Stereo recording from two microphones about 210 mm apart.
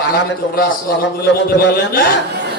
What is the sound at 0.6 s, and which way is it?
A man's voice, 45° left (ahead or behind).